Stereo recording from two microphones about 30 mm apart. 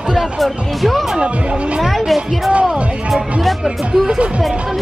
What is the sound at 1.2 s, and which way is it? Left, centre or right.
Speech, right.